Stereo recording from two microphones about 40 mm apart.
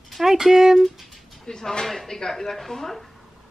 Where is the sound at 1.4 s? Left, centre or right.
Centre.